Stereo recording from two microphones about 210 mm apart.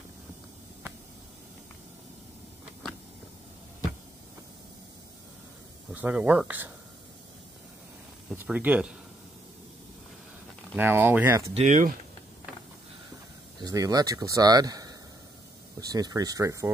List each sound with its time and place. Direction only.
5.9 s speech: 5° right (ahead or behind)
8.3 s speech: 5° right (ahead or behind)
10.8 s speech: 10° right (ahead or behind)
11.5 s speech: 35° right (ahead or behind)
13.6 s speech: 15° right (ahead or behind)